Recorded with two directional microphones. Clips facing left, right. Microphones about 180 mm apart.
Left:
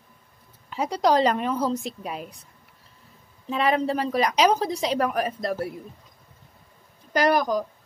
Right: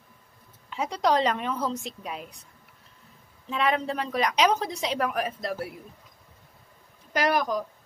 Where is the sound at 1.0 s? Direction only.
5° left (ahead or behind).